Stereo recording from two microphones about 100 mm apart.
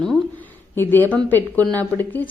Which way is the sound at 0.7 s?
20° left (ahead or behind).